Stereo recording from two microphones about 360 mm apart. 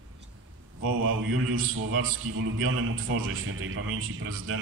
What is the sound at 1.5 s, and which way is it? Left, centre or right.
A man's voice, right.